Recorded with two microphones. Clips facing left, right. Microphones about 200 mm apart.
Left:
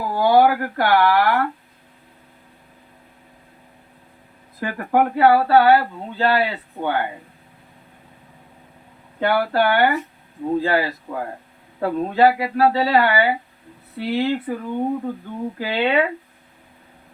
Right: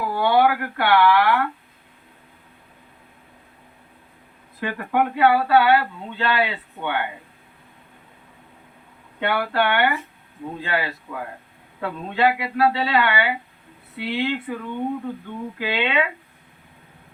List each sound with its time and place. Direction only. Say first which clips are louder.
0.2 s speech: left 4 dB; 40° left (ahead or behind)
4.6 s speech: left 3 dB; 40° left (ahead or behind)
9.2 s speech: left 3 dB; 40° left (ahead or behind)